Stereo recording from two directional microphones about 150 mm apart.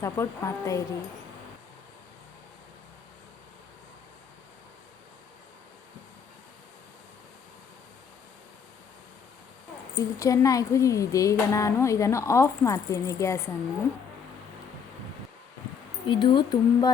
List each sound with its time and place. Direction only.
0.0 s speech: 20° left (ahead or behind)
9.9 s speech: 20° left (ahead or behind)
16.0 s speech: 30° left (ahead or behind)